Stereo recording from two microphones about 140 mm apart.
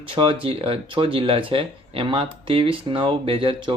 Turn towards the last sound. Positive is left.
turn(degrees=-40)  # may be behind; listen again after turning